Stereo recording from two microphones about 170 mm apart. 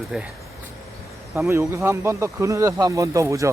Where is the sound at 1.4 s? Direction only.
15° right (ahead or behind).